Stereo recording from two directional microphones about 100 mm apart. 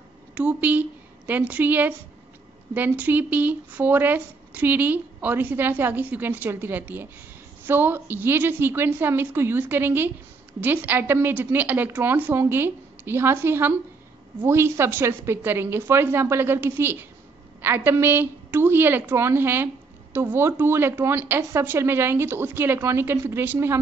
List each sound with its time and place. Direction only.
0.3 s a woman's voice: 15° right (ahead or behind)